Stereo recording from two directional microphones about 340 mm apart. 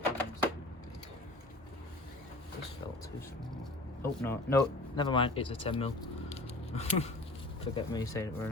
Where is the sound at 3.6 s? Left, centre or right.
Centre.